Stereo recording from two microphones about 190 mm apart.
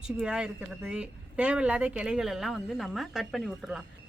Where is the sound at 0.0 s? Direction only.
5° right (ahead or behind).